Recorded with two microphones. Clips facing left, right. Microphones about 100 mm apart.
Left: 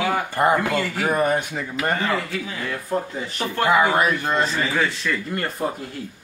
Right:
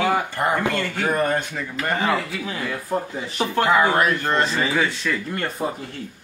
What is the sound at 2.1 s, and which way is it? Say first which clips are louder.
A man's voice: right 1 dB; centre (ahead or behind).